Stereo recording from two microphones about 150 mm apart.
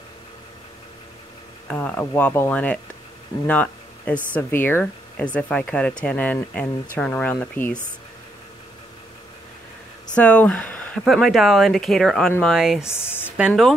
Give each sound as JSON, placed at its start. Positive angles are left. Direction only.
{"t": 1.7, "sound": "speech", "side_deg": 10}
{"t": 10.1, "sound": "speech", "side_deg": 10}
{"t": 12.8, "sound": "speech", "side_deg": 15}
{"t": 13.5, "sound": "speech", "side_deg": 0}